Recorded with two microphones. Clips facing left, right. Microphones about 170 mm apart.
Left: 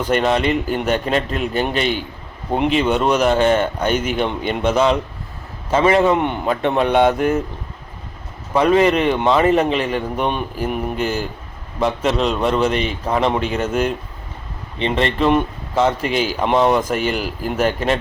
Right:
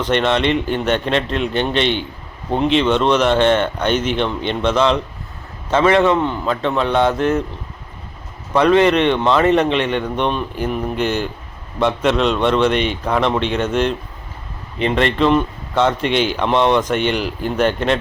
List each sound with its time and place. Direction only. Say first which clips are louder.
0.0 s a man's voice: even; 5° left (ahead or behind)
6.1 s a man's voice: even; 20° left (ahead or behind)
8.8 s a man's voice: right 1 dB; 5° left (ahead or behind)
13.1 s speech: left 1 dB; 30° left (ahead or behind)
13.3 s a man's voice: right 1 dB; 5° left (ahead or behind)